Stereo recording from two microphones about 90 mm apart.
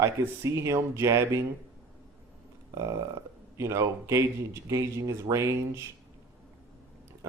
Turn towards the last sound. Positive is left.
turn(degrees=-35)  # may be behind; listen again after turning